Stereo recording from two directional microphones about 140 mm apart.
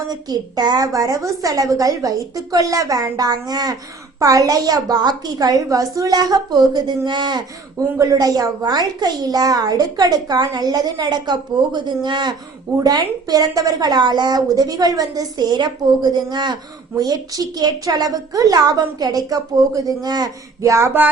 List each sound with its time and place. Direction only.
0.1 s a woman's voice: 30° right (ahead or behind)